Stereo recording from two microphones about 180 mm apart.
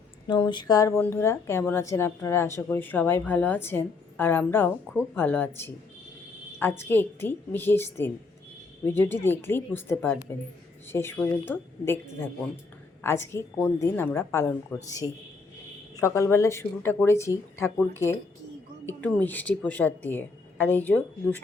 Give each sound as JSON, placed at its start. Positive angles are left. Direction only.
{"t": 0.3, "sound": "a woman's voice", "side_deg": 25}
{"t": 13.0, "sound": "a woman's voice", "side_deg": 15}
{"t": 16.0, "sound": "a woman's voice", "side_deg": 15}